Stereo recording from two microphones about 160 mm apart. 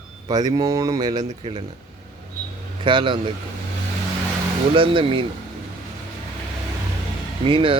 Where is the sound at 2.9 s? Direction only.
30° right (ahead or behind).